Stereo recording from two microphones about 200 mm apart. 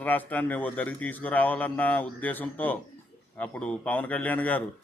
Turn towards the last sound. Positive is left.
turn(degrees=5)  # may be behind; listen again after turning